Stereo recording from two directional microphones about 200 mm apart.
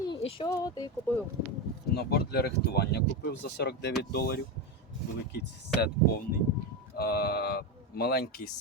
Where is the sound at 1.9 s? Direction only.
50° left (ahead or behind).